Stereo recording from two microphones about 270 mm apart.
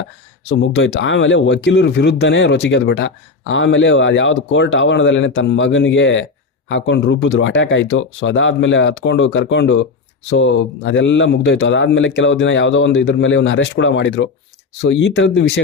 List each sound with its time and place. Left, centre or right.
0.5 s speech: left